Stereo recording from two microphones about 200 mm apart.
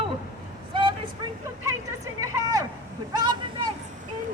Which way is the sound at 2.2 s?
15° right (ahead or behind).